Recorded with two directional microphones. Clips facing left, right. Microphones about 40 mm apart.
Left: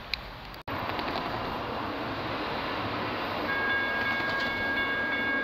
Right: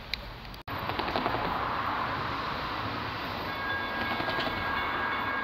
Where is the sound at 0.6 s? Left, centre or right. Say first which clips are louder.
Left 1 dB; centre.